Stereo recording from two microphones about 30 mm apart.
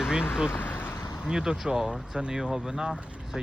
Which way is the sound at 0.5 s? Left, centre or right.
Left.